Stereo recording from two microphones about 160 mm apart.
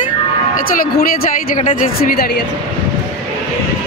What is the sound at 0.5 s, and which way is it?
A woman's voice, 60° left (ahead or behind).